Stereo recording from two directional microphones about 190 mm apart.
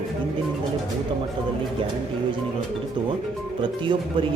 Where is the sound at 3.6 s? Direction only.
25° right (ahead or behind).